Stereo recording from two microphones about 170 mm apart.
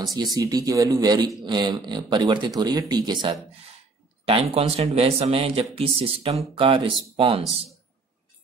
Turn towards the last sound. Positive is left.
turn(degrees=-35)  # may be behind; listen again after turning